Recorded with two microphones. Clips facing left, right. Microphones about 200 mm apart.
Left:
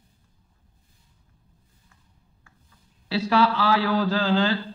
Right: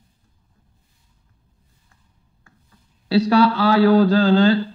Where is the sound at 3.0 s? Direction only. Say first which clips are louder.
Right 6 dB; 35° right (ahead or behind).